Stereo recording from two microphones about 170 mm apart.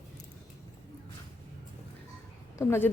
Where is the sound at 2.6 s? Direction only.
15° left (ahead or behind).